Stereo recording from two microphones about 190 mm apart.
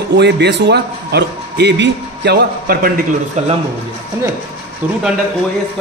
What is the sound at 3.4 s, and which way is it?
Speech, 35° right (ahead or behind).